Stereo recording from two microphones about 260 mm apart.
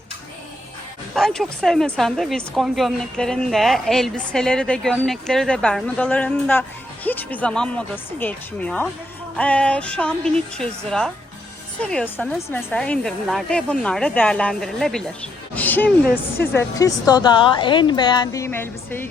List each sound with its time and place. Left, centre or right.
1.1 s speech: centre
15.5 s music: centre
16.0 s speech: left
16.6 s speech: centre